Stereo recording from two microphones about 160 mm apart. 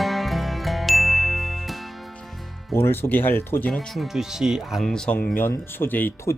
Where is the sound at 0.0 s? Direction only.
Centre (ahead or behind).